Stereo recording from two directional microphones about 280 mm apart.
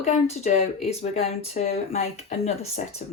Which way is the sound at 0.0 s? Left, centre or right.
Left.